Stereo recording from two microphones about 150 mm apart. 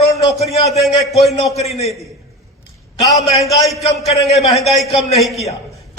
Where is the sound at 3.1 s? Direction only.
45° left (ahead or behind).